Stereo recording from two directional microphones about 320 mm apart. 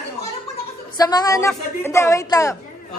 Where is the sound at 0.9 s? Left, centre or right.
Centre.